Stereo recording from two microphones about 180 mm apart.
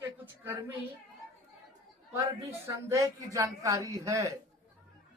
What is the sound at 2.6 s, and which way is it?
Speech, 15° right (ahead or behind).